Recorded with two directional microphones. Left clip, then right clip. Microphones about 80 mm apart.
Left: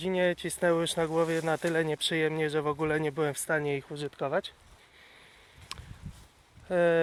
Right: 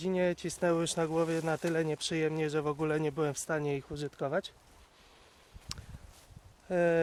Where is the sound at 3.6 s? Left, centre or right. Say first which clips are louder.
Left 3 dB; right.